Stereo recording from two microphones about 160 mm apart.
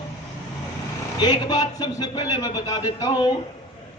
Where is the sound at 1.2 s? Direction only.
25° left (ahead or behind).